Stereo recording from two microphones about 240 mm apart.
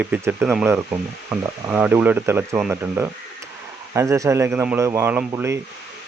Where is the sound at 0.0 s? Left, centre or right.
Centre.